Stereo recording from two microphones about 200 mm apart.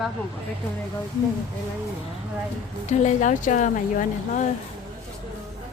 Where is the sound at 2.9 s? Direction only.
35° left (ahead or behind).